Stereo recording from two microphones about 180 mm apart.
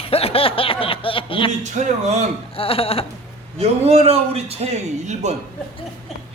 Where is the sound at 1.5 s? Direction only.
40° right (ahead or behind).